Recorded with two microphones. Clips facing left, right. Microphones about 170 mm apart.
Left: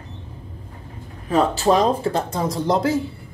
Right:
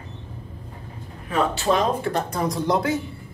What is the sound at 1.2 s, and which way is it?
Speech, 35° left (ahead or behind).